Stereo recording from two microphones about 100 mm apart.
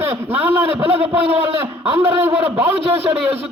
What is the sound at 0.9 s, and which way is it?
Speech, 80° right.